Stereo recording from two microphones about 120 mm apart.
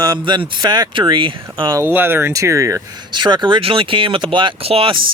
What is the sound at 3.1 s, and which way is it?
Speech, 40° right (ahead or behind).